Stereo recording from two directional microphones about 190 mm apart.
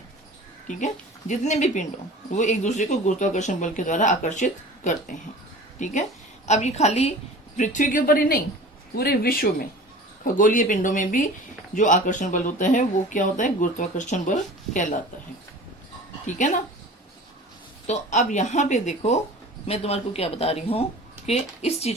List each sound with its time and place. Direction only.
0.7 s a woman's voice: 40° left (ahead or behind)
16.2 s speech: 40° left (ahead or behind)
17.8 s speech: 40° left (ahead or behind)